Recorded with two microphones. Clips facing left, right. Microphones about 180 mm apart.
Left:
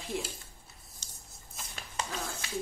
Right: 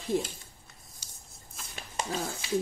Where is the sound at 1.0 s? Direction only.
10° right (ahead or behind).